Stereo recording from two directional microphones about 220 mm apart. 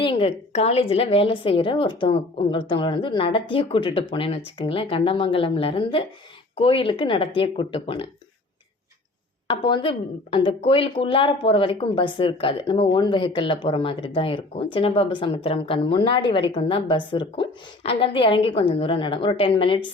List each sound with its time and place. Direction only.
0.0 s speech: 25° left (ahead or behind)
9.5 s speech: 20° left (ahead or behind)